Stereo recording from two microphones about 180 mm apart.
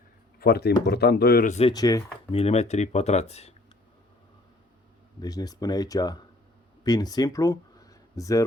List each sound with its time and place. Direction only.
0.3 s speech: 60° left (ahead or behind)
1.7 s speech: 20° left (ahead or behind)
2.3 s speech: 35° left (ahead or behind)
5.2 s speech: 20° left (ahead or behind)